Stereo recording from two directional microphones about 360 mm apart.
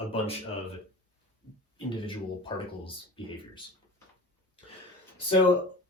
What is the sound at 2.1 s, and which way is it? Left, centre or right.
Speech, centre.